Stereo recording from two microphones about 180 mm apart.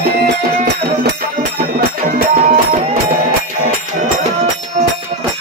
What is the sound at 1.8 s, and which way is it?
Music, 60° right (ahead or behind).